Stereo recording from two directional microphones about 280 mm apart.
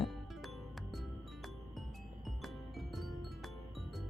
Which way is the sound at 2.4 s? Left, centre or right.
Centre.